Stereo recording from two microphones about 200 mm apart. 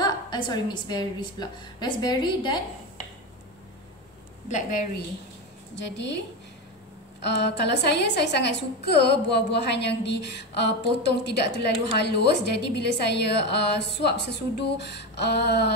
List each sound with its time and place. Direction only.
0.0 s a woman's voice: 20° left (ahead or behind)
4.5 s a woman's voice: 40° left (ahead or behind)
5.8 s a woman's voice: 60° left (ahead or behind)